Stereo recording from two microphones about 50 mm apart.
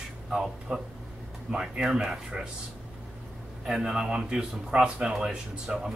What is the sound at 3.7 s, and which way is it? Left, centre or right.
Speech, centre.